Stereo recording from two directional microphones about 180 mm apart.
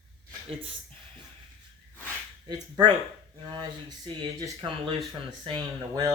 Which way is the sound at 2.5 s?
25° right (ahead or behind).